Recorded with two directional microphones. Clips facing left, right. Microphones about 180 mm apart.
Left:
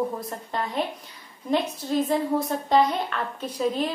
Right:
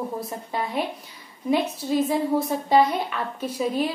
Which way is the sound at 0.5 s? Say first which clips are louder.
Right 1 dB; 5° right (ahead or behind).